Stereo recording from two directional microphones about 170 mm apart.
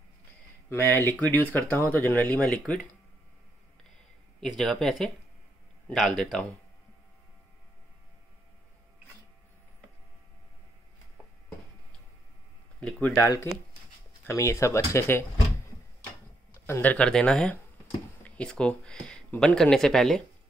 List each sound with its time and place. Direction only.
0.7 s speech: 10° left (ahead or behind)
4.4 s speech: centre (ahead or behind)
12.8 s speech: 10° left (ahead or behind)
16.6 s speech: 10° left (ahead or behind)